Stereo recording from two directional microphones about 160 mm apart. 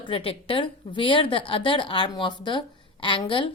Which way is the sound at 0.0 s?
35° left (ahead or behind).